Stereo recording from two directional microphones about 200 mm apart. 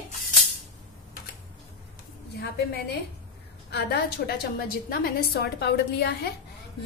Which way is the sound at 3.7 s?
55° left (ahead or behind).